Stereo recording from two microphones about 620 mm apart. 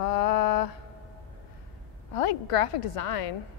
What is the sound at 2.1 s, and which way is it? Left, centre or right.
A woman's voice, left.